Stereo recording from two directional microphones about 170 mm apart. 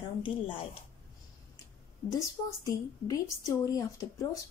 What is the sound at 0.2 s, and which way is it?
Speech, 30° left (ahead or behind).